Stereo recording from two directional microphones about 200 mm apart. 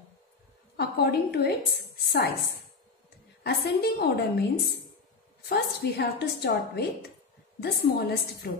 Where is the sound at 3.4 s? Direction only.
55° left (ahead or behind).